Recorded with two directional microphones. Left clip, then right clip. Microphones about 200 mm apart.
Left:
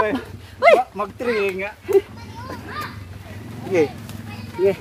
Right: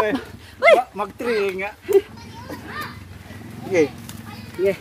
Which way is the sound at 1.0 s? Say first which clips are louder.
Left 1 dB; 40° right (ahead or behind).